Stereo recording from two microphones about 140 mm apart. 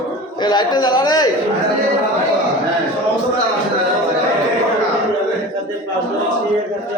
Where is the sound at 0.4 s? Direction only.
30° left (ahead or behind).